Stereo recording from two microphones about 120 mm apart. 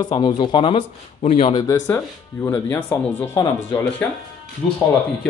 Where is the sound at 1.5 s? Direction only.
30° left (ahead or behind).